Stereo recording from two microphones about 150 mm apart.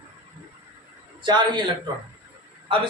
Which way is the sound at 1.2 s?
30° right (ahead or behind).